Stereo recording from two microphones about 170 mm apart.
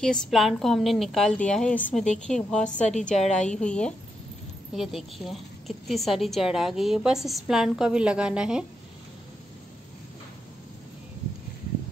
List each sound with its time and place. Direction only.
0.0 s a woman's voice: 5° left (ahead or behind)
2.6 s a woman's voice: 45° left (ahead or behind)
3.3 s a woman's voice: 5° left (ahead or behind)